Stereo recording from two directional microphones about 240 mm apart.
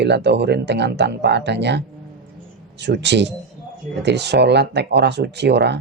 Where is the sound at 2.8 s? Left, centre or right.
Right.